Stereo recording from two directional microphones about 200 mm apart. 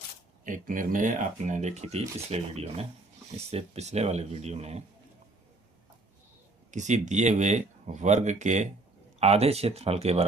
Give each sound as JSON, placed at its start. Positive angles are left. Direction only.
{"t": 0.4, "sound": "speech", "side_deg": -40}
{"t": 6.7, "sound": "speech", "side_deg": -35}